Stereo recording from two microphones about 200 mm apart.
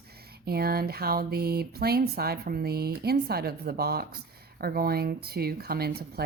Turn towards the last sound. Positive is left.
turn(degrees=-50)  # may be behind; listen again after turning